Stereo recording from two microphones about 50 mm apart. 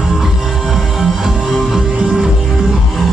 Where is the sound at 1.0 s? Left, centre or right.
Centre.